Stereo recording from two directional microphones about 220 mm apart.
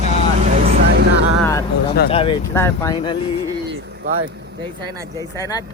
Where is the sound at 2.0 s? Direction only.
25° left (ahead or behind).